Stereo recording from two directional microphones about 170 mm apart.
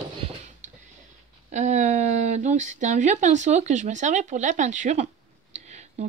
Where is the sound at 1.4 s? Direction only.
45° right (ahead or behind).